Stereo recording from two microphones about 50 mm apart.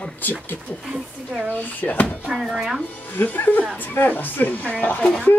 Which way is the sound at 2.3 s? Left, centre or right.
Centre.